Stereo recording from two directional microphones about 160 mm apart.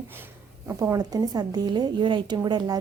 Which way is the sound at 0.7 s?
20° right (ahead or behind).